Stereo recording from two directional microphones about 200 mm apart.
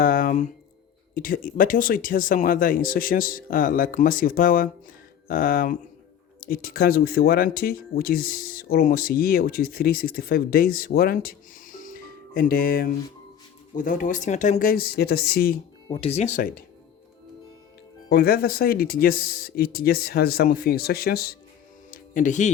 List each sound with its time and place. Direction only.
0.0 s a sound: 45° left (ahead or behind)
1.1 s speech: 45° left (ahead or behind)
15.9 s speech: 30° left (ahead or behind)
18.1 s speech: 50° left (ahead or behind)
21.8 s music: 45° left (ahead or behind)